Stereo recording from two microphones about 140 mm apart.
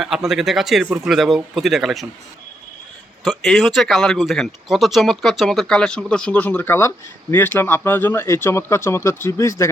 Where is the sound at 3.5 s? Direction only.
Centre (ahead or behind).